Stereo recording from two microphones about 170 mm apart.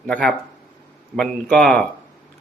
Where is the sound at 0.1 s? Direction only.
5° left (ahead or behind).